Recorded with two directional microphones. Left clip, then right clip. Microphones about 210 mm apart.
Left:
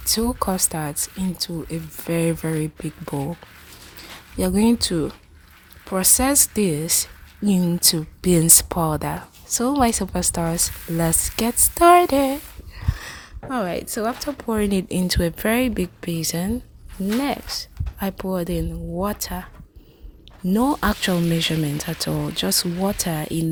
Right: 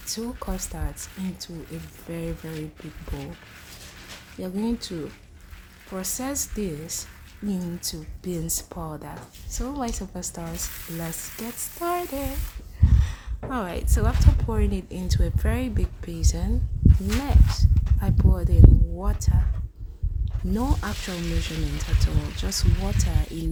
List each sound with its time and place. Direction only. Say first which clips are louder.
0.1 s a woman's voice: left 11 dB; 40° left (ahead or behind)
4.4 s a woman's voice: left 10 dB; 45° left (ahead or behind)
12.8 s a sound: even; 35° left (ahead or behind)
14.4 s speech: left 10 dB; 40° left (ahead or behind)
20.5 s speech: left 9 dB; 35° left (ahead or behind)